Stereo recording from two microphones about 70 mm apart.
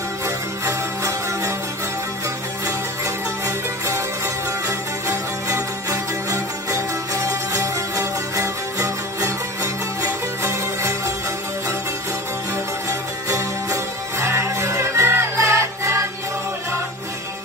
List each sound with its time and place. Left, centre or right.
0.7 s music: right
3.4 s music: right
13.3 s music: right